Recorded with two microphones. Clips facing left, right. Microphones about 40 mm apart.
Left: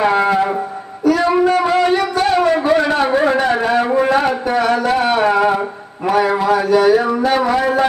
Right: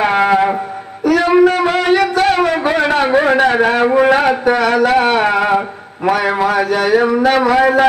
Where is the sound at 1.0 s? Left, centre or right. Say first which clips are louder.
Right 3 dB; right.